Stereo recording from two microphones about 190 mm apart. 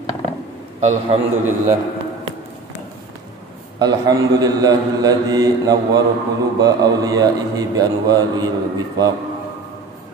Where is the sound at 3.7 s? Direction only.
20° right (ahead or behind).